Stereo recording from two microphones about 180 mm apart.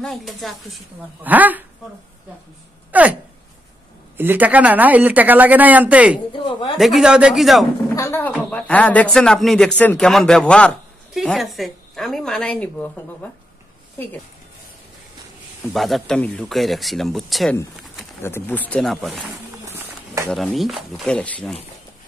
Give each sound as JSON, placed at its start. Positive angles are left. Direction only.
{"t": 0.0, "sound": "speech", "side_deg": 0}
{"t": 2.9, "sound": "a sound", "side_deg": -10}
{"t": 4.2, "sound": "speech", "side_deg": -10}
{"t": 6.1, "sound": "a sound", "side_deg": 25}
{"t": 6.8, "sound": "speech", "side_deg": 0}
{"t": 7.9, "sound": "speech", "side_deg": 15}
{"t": 15.7, "sound": "speech", "side_deg": 0}
{"t": 18.2, "sound": "speech", "side_deg": 10}
{"t": 19.6, "sound": "a sound", "side_deg": -15}
{"t": 20.2, "sound": "speech", "side_deg": 0}